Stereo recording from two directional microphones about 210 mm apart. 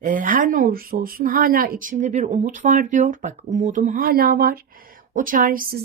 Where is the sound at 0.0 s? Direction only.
40° right (ahead or behind).